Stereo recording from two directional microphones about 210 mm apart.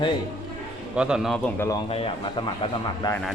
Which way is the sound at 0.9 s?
5° right (ahead or behind).